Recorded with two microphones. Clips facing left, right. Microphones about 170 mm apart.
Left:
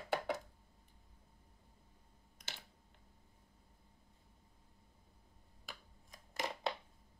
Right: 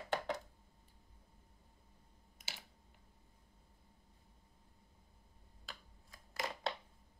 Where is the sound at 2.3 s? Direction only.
5° right (ahead or behind).